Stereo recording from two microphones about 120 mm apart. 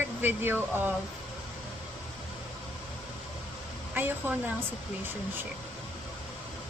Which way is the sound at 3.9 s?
15° right (ahead or behind).